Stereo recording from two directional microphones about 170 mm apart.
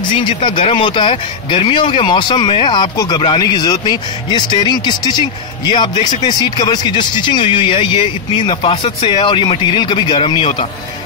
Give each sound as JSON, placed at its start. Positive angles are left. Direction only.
{"t": 0.1, "sound": "speech", "side_deg": 30}